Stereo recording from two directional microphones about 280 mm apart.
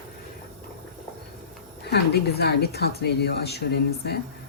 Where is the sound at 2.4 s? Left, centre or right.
Left.